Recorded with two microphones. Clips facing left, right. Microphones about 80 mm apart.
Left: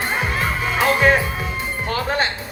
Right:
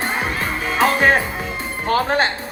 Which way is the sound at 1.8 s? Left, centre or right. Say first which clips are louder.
Right 5 dB; right.